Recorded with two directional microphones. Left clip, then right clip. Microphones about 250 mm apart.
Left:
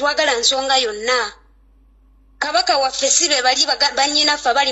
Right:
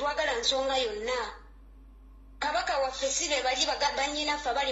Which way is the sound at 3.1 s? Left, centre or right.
Left.